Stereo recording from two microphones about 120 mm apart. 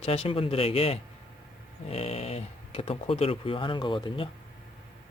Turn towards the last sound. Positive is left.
turn(degrees=45)  # may be behind; listen again after turning